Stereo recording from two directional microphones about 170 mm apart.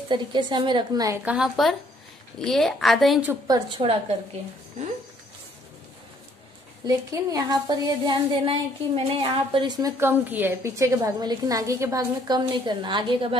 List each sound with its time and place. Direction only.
0.1 s a woman's voice: 25° right (ahead or behind)
1.2 s a woman's voice: 5° right (ahead or behind)
3.4 s a woman's voice: 25° right (ahead or behind)
6.9 s a woman's voice: 20° right (ahead or behind)